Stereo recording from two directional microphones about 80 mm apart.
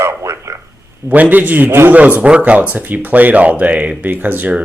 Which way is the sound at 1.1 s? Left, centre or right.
Right.